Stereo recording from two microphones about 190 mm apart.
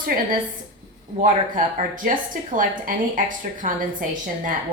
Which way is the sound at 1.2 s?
45° right (ahead or behind).